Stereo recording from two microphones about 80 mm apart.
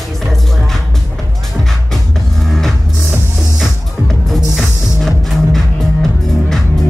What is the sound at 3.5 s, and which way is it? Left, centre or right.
Music, centre.